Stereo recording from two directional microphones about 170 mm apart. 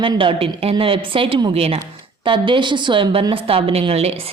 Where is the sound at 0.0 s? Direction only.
30° right (ahead or behind).